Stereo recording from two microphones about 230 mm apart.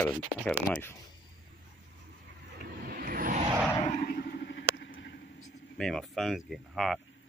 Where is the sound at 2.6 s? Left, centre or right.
Right.